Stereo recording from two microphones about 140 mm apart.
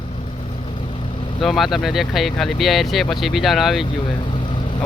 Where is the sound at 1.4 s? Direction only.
Centre (ahead or behind).